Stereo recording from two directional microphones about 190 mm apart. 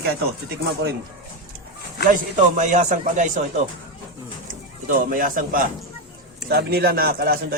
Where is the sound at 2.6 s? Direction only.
40° right (ahead or behind).